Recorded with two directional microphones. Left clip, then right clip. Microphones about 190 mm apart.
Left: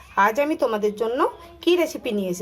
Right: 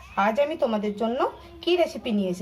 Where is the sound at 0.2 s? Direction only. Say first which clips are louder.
Left 3 dB; 35° left (ahead or behind).